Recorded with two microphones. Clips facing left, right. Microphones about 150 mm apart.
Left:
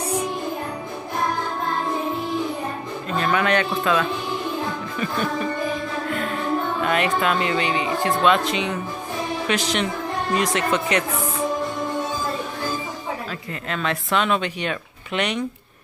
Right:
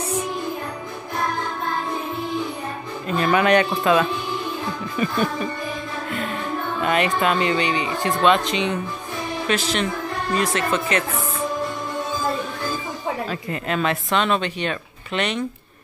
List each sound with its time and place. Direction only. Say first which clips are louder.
3.2 s speech: right 3 dB; 15° right (ahead or behind)
6.8 s speech: right 4 dB; centre (ahead or behind)
9.5 s speech: right 2 dB; 15° left (ahead or behind)
13.3 s speech: right 4 dB; 15° right (ahead or behind)
14.1 s speech: left 1 dB; 10° left (ahead or behind)